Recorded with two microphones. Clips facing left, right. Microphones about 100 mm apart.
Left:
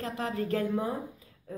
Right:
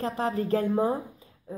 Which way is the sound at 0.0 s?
30° right (ahead or behind).